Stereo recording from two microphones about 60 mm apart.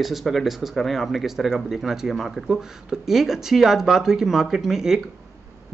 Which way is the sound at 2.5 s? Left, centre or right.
Centre.